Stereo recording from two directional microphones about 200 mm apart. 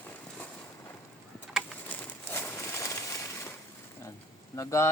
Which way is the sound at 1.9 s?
10° left (ahead or behind).